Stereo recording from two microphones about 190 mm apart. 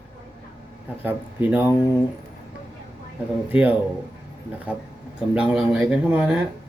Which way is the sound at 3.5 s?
10° right (ahead or behind).